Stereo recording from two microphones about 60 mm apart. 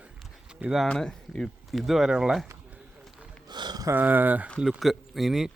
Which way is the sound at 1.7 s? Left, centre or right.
Centre.